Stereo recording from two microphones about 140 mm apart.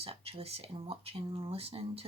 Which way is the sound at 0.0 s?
45° right (ahead or behind).